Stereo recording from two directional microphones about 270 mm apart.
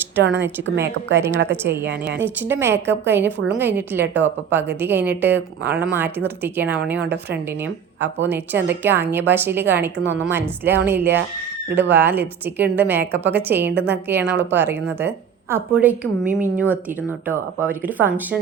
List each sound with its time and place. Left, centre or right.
0.2 s a woman's voice: right
1.5 s a woman's voice: centre
1.9 s a woman's voice: right
2.2 s a woman's voice: centre
8.3 s a woman's voice: centre
17.2 s a woman's voice: centre